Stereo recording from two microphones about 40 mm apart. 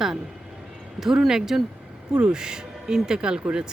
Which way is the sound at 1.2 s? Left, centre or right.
Centre.